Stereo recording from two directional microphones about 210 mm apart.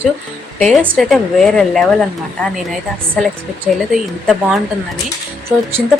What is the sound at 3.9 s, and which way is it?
Speech, centre (ahead or behind).